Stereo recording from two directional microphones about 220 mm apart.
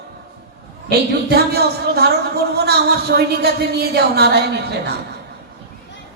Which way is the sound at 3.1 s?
45° right (ahead or behind).